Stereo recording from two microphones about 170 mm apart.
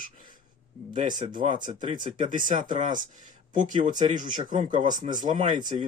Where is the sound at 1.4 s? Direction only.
40° right (ahead or behind).